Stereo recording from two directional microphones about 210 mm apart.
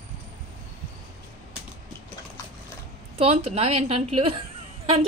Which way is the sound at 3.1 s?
30° right (ahead or behind).